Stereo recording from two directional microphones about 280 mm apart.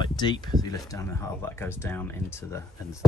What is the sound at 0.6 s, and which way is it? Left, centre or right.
Speech, centre.